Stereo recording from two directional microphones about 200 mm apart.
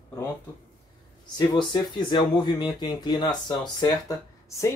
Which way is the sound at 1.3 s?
20° left (ahead or behind).